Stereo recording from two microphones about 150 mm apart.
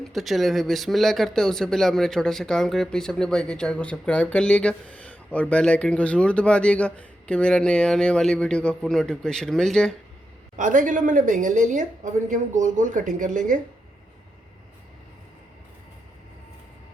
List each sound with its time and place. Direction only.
0.0 s speech: centre (ahead or behind)
10.6 s a woman's voice: 60° right (ahead or behind)